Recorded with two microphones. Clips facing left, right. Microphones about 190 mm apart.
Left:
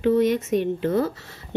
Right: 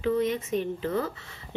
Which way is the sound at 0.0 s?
80° left.